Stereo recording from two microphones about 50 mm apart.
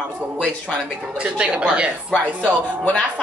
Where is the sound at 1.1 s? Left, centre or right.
Right.